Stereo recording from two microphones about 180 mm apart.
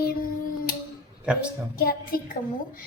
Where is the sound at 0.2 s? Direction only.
55° left (ahead or behind).